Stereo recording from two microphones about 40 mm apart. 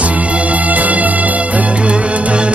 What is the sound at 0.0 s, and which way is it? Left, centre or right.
Music, right.